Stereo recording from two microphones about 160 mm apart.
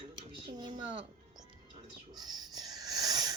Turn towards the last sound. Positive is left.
turn(degrees=-25)  # may be behind; listen again after turning